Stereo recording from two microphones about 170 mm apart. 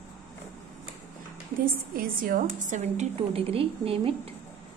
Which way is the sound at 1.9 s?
55° right (ahead or behind).